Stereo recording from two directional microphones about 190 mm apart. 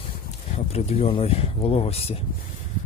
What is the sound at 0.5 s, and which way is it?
Speech, 35° left (ahead or behind).